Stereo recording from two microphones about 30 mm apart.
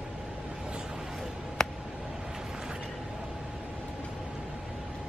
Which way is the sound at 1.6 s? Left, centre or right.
Centre.